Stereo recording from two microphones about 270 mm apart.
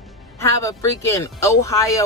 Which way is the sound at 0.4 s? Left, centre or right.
Centre.